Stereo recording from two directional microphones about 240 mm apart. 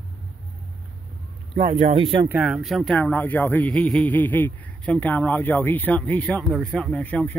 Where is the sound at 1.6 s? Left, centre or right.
Right.